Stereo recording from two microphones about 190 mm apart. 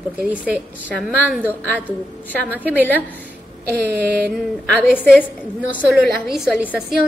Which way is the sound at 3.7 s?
55° right (ahead or behind).